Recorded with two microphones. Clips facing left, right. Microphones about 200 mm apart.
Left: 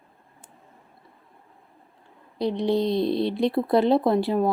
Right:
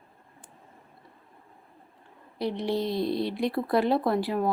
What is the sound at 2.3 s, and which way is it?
Speech, 15° left (ahead or behind).